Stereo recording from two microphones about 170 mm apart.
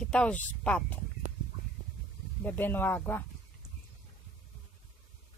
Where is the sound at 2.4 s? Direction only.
10° left (ahead or behind).